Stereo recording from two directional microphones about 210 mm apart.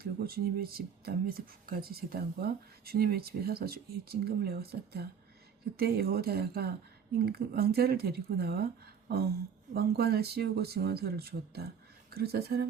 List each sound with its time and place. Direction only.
0.0 s speech: 45° right (ahead or behind)
9.0 s a sound: 45° right (ahead or behind)
9.7 s speech: 50° right (ahead or behind)